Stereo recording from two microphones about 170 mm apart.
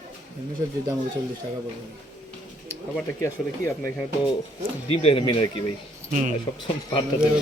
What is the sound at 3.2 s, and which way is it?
Speech, 15° left (ahead or behind).